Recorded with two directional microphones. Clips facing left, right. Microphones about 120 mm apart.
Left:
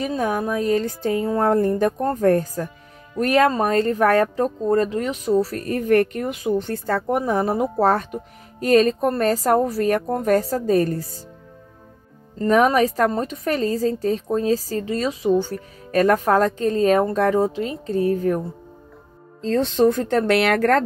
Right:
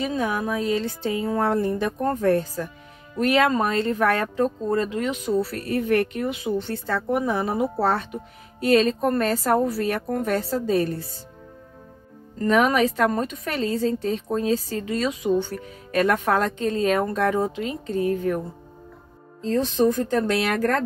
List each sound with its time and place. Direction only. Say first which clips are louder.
0.0 s speech: left 2 dB; 45° left (ahead or behind)
12.4 s a woman's voice: left 3 dB; 35° left (ahead or behind)
19.4 s speech: left 3 dB; 65° left (ahead or behind)